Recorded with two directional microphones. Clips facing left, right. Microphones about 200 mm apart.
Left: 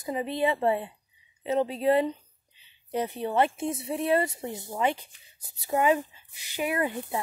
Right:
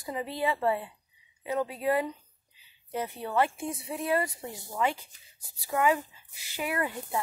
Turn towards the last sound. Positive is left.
turn(degrees=20)  # may be behind; listen again after turning